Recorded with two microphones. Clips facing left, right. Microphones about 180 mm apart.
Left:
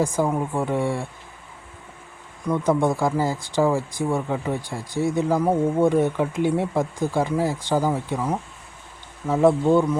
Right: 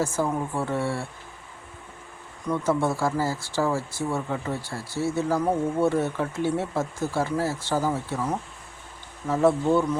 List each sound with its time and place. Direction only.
0.0 s speech: 15° left (ahead or behind)
2.5 s speech: 15° left (ahead or behind)